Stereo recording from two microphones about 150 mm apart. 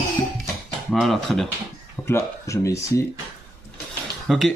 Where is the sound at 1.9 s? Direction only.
15° left (ahead or behind).